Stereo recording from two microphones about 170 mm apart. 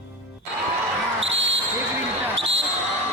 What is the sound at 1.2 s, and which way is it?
Basketball bounce, 90° right.